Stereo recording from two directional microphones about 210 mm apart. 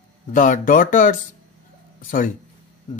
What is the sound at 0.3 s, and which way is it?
A man's voice, 40° left (ahead or behind).